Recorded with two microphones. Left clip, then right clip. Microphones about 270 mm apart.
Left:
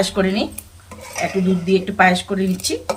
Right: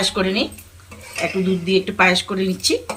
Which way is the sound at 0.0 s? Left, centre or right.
Centre.